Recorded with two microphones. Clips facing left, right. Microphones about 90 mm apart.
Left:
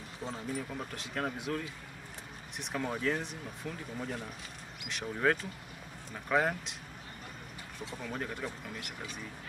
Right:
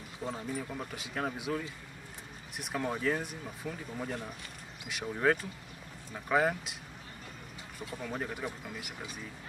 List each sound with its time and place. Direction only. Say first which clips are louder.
0.2 s speech: right 1 dB; 5° right (ahead or behind)
4.8 s speech: right 1 dB; 5° right (ahead or behind)
8.1 s speech: right 1 dB; 5° right (ahead or behind)